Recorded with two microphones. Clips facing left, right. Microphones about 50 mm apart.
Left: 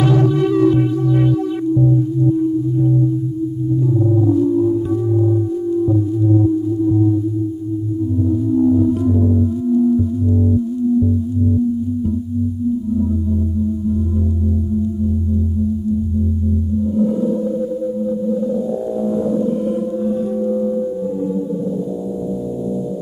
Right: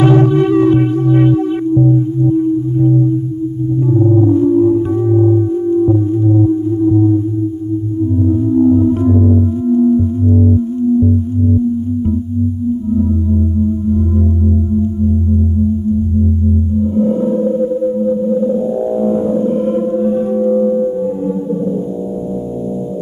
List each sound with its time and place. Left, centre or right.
0.0 s music: right
3.9 s singing bowl: right
8.3 s singing bowl: right
16.8 s music: right